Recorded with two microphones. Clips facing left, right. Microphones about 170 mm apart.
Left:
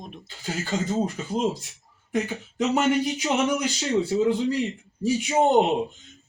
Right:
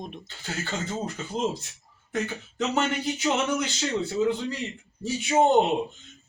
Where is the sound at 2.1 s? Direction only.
10° left (ahead or behind).